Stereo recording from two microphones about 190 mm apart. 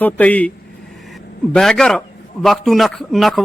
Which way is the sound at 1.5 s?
5° left (ahead or behind).